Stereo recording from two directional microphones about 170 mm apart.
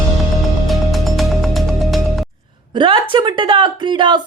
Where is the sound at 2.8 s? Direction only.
30° right (ahead or behind).